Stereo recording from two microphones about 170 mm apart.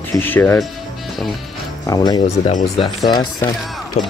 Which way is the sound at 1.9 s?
25° left (ahead or behind).